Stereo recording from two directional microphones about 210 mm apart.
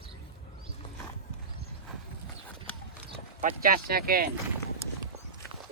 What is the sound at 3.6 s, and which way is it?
Speech, 45° right (ahead or behind).